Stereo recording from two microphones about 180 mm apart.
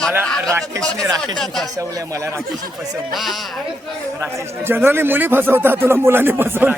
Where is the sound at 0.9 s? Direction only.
20° right (ahead or behind).